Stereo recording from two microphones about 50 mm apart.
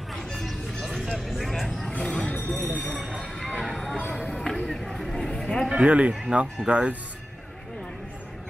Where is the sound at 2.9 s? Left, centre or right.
Centre.